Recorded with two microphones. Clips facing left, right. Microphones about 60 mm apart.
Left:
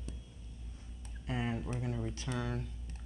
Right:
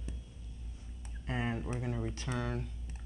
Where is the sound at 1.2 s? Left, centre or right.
Right.